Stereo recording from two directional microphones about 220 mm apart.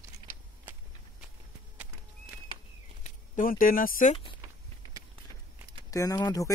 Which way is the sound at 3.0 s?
40° left (ahead or behind).